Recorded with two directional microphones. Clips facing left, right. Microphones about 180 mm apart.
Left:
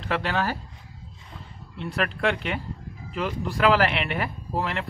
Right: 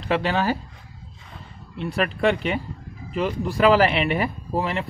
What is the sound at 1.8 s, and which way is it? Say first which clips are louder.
Speech: right 4 dB; 10° right (ahead or behind).